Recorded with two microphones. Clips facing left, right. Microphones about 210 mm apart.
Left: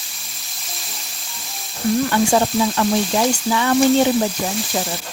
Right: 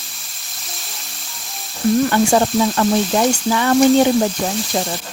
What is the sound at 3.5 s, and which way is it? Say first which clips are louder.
Speech: right 2 dB; 45° right (ahead or behind).